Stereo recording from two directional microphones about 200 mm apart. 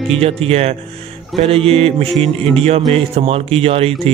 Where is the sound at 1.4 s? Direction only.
30° right (ahead or behind).